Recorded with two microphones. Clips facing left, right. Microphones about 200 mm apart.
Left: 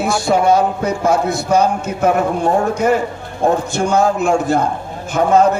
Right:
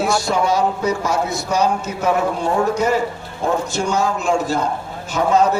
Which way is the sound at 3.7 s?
55° left (ahead or behind).